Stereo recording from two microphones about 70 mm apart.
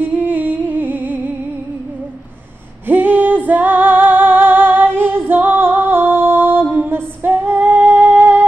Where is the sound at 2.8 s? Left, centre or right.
Right.